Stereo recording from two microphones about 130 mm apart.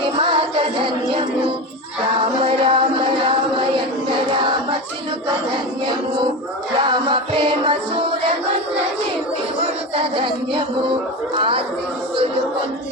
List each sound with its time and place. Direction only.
0.2 s music: 50° right (ahead or behind)
6.7 s music: 35° right (ahead or behind)
9.9 s music: 40° right (ahead or behind)
11.3 s speech: 40° right (ahead or behind)